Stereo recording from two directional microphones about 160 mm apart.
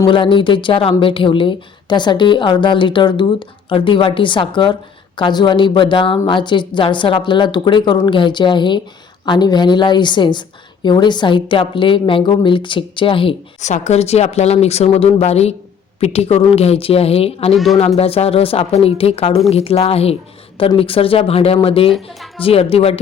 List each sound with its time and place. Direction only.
0.0 s speech: 30° left (ahead or behind)
13.6 s speech: 45° left (ahead or behind)